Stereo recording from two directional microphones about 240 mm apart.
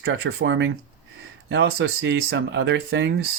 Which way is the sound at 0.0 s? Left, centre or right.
Right.